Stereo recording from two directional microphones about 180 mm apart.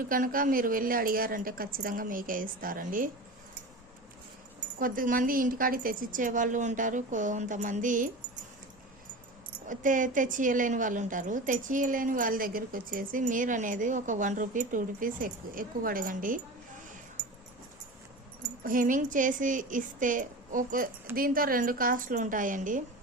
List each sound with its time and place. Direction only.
0.1 s a woman's voice: 50° right (ahead or behind)
4.8 s a woman's voice: 50° right (ahead or behind)
9.6 s a woman's voice: 45° right (ahead or behind)
18.6 s a woman's voice: 50° right (ahead or behind)